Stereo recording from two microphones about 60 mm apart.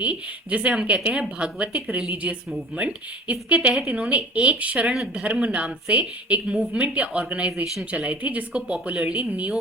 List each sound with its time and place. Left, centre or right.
0.0 s speech: right
7.5 s speech: centre
7.9 s speech: right